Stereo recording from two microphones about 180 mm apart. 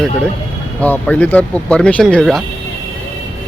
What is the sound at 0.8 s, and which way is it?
Speech, 10° left (ahead or behind).